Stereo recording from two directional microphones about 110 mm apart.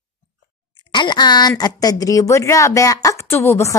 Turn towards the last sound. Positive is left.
turn(degrees=20)  # may be behind; listen again after turning